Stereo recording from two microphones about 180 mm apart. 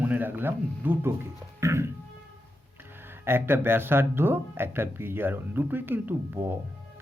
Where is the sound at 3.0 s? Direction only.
10° right (ahead or behind).